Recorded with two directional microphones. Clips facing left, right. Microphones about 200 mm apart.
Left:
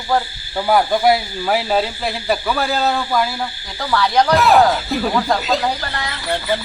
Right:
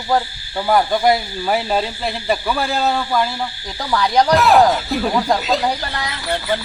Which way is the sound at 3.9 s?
15° right (ahead or behind).